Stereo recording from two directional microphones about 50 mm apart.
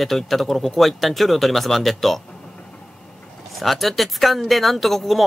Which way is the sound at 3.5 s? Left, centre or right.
Centre.